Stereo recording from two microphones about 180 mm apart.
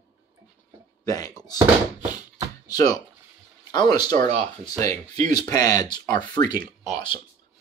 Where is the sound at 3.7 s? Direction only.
25° left (ahead or behind).